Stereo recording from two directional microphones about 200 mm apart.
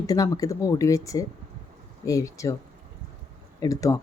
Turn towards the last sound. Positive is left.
turn(degrees=15)  # may be behind; listen again after turning